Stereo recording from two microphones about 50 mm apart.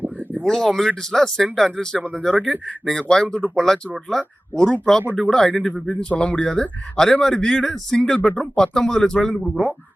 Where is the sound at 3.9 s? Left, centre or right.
Centre.